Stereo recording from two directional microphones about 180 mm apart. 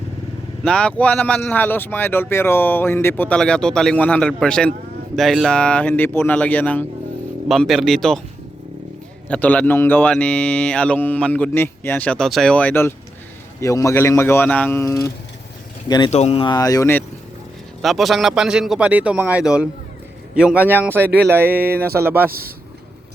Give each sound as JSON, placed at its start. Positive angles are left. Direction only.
{"t": 0.6, "sound": "a man's voice", "side_deg": 5}
{"t": 9.3, "sound": "speech", "side_deg": 10}
{"t": 16.1, "sound": "speech", "side_deg": 35}
{"t": 17.8, "sound": "a man's voice", "side_deg": 0}
{"t": 22.3, "sound": "a man's voice", "side_deg": -55}